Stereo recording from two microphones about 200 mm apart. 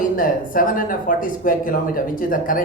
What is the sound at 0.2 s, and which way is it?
Speech, 45° left (ahead or behind).